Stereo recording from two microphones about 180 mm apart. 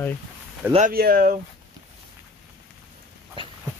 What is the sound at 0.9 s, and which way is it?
Speech, 55° right (ahead or behind).